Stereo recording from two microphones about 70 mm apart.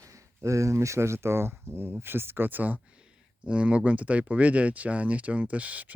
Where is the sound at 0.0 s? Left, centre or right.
Right.